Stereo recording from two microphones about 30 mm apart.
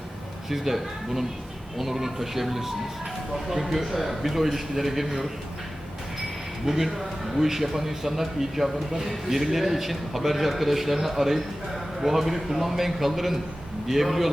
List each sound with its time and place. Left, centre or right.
0.5 s a man's voice: centre
6.7 s a man's voice: centre